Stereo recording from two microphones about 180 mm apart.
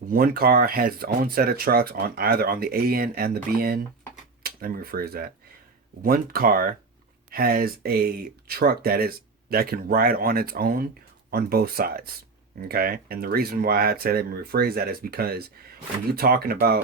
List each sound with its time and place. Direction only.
0.1 s speech: 55° right (ahead or behind)